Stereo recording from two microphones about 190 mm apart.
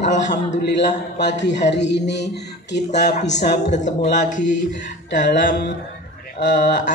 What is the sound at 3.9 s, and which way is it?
Speech, 40° left (ahead or behind).